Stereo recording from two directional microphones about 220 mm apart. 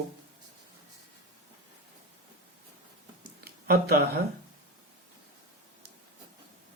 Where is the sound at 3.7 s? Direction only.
45° right (ahead or behind).